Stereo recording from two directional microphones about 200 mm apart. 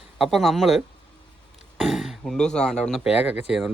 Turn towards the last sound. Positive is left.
turn(degrees=-5)  # may be behind; listen again after turning